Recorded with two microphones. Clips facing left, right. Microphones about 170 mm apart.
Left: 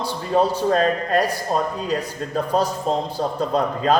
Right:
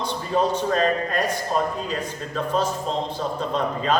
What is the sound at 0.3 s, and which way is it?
A man's voice, 35° left (ahead or behind).